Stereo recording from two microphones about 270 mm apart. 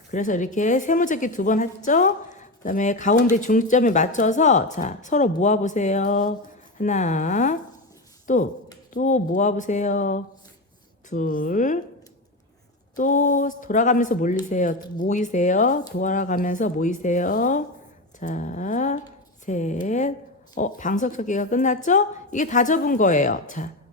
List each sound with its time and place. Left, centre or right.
0.1 s a woman's voice: left
13.0 s a woman's voice: left